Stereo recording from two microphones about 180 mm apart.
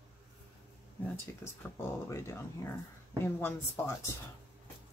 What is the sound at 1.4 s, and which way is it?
Speech, 15° left (ahead or behind).